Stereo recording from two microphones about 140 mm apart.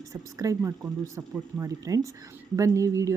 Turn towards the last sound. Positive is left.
turn(degrees=-20)  # may be behind; listen again after turning